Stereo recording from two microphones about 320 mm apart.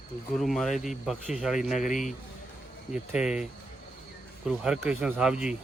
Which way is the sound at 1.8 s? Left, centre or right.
Left.